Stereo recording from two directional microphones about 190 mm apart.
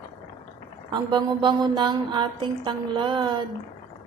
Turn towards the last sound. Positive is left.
turn(degrees=-25)  # may be behind; listen again after turning